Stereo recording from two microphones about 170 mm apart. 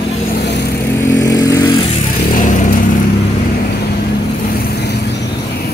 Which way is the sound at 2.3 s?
45° left (ahead or behind).